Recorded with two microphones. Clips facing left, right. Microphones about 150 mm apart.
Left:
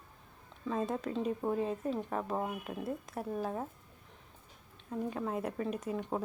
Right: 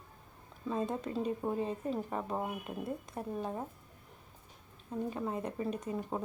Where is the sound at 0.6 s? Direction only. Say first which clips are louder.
Left 1 dB; centre (ahead or behind).